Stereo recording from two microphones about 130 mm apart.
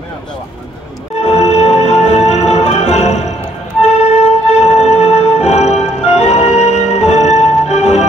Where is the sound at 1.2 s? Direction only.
55° left (ahead or behind).